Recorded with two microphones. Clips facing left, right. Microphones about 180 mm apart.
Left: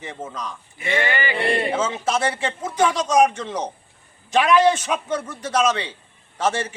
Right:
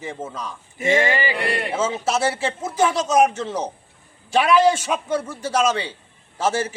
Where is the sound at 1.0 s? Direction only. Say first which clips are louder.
Right 2 dB; 25° right (ahead or behind).